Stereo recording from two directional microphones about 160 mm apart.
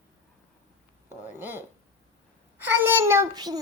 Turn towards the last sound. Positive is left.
turn(degrees=-25)  # may be behind; listen again after turning